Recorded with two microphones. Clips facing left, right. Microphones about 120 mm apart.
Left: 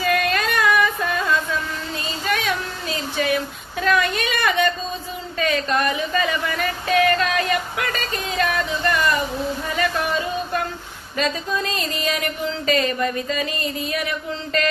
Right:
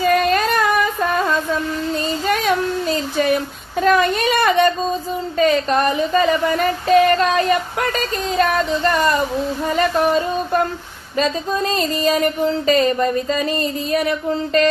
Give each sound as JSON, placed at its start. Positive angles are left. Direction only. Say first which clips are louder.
{"t": 0.0, "sound": "music", "louder": "right 5 dB", "side_deg": -40}
{"t": 2.2, "sound": "a sound", "louder": "right 5 dB", "side_deg": -45}
{"t": 3.8, "sound": "speech", "louder": "right 5 dB", "side_deg": -40}